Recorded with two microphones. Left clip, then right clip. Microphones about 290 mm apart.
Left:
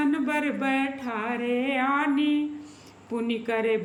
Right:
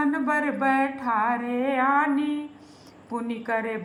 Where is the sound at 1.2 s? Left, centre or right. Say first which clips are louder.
Right 3 dB; centre.